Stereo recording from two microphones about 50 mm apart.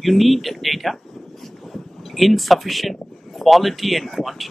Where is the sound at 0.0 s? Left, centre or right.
Centre.